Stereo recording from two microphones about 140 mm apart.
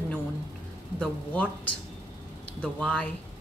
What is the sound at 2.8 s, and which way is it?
Speech, 5° left (ahead or behind).